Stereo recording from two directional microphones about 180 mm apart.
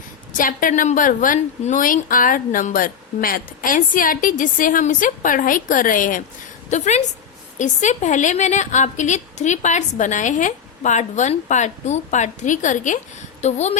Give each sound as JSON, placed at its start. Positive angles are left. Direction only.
{"t": 0.3, "sound": "a woman's voice", "side_deg": 50}